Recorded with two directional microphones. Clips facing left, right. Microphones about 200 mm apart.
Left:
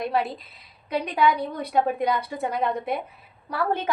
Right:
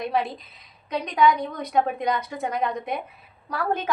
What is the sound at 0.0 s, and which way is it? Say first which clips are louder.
A woman's voice: even; 5° left (ahead or behind).